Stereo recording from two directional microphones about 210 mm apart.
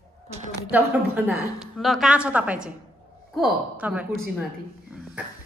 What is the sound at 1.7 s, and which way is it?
Speech, centre (ahead or behind).